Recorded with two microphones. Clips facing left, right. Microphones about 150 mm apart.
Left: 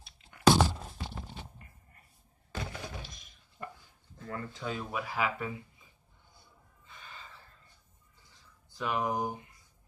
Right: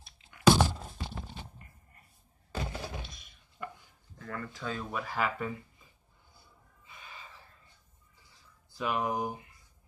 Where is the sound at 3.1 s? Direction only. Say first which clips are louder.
Even; 45° left (ahead or behind).